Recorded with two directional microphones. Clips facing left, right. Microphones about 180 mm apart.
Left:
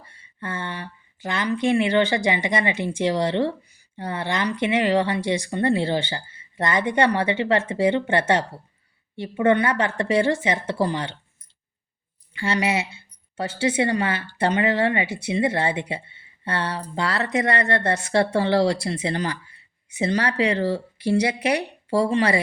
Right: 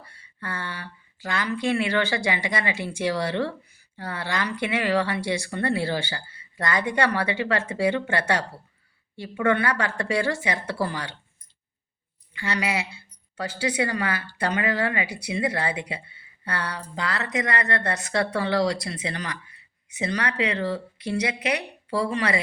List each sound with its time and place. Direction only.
0.0 s a woman's voice: 20° left (ahead or behind)
12.3 s a woman's voice: 30° left (ahead or behind)